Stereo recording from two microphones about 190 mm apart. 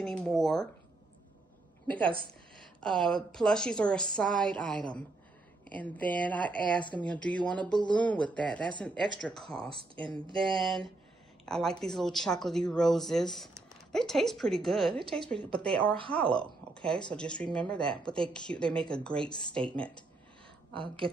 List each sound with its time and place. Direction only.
0.0 s speech: 5° left (ahead or behind)
1.9 s a woman's voice: 5° left (ahead or behind)
9.7 s speech: 25° right (ahead or behind)
10.3 s a woman's voice: centre (ahead or behind)
20.7 s speech: 25° right (ahead or behind)